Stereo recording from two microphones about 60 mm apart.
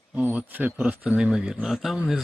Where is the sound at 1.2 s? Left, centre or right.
Centre.